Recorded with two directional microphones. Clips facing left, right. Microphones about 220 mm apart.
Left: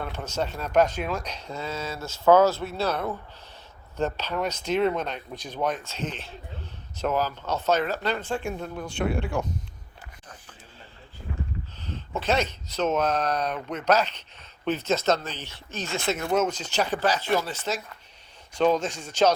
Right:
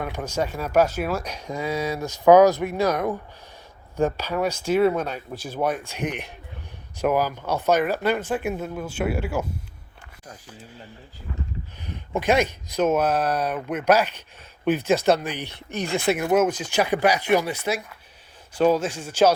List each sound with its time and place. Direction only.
0.0 s speech: 10° right (ahead or behind)
11.9 s speech: 15° right (ahead or behind)